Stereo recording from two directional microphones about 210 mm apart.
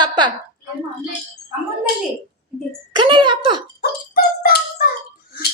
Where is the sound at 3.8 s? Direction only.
45° left (ahead or behind).